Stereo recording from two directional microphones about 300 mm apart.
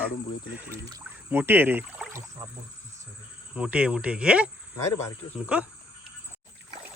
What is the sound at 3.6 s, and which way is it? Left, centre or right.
Speech, centre.